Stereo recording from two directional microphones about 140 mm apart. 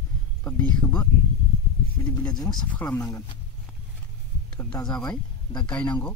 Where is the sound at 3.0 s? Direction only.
25° left (ahead or behind).